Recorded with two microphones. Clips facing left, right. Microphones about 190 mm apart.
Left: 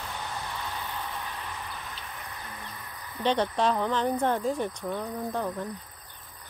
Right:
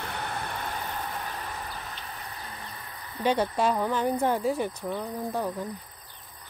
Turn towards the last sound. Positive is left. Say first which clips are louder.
# right 1 dB
turn(degrees=-10)  # may be behind; listen again after turning